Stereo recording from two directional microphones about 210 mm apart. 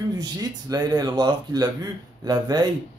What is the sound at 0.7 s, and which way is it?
Speech, 20° right (ahead or behind).